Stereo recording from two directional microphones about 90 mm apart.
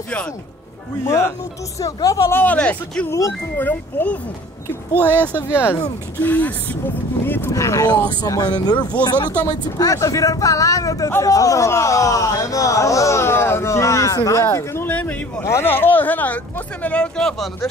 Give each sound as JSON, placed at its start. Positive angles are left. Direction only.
{"t": 1.0, "sound": "speech", "side_deg": 30}
{"t": 1.8, "sound": "speech", "side_deg": 40}
{"t": 3.1, "sound": "speech", "side_deg": 35}
{"t": 3.5, "sound": "speech", "side_deg": 20}
{"t": 5.1, "sound": "speech", "side_deg": -20}
{"t": 6.1, "sound": "speech", "side_deg": 20}
{"t": 7.5, "sound": "speech", "side_deg": 35}
{"t": 8.2, "sound": "speech", "side_deg": 50}
{"t": 9.0, "sound": "speech", "side_deg": 20}
{"t": 9.8, "sound": "speech", "side_deg": 40}
{"t": 14.4, "sound": "speech", "side_deg": 25}
{"t": 14.9, "sound": "speech", "side_deg": 15}